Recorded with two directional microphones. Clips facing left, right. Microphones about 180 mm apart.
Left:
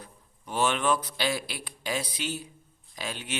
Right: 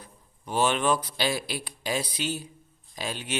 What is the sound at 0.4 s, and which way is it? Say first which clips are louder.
A man's voice: right 2 dB; 30° right (ahead or behind).